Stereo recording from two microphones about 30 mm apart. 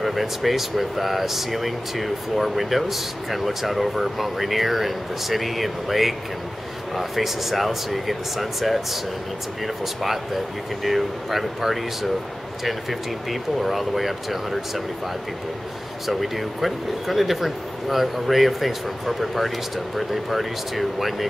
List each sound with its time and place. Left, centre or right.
0.0 s speech: centre
10.0 s speech: centre
13.3 s speech: centre
16.1 s speech: centre